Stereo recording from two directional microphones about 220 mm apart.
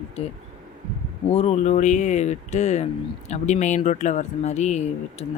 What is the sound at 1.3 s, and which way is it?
Speech, 30° left (ahead or behind).